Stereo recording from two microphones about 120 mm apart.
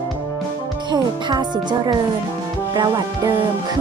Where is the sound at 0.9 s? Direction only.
35° right (ahead or behind).